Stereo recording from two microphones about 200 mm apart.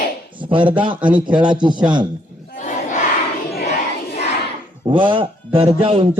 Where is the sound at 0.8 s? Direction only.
25° right (ahead or behind).